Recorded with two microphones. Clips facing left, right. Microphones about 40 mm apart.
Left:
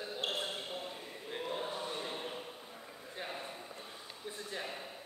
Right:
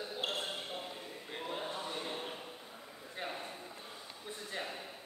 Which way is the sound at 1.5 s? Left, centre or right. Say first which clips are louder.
Even; centre.